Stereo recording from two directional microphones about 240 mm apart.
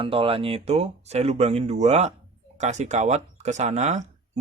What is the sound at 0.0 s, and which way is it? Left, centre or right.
Speech, right.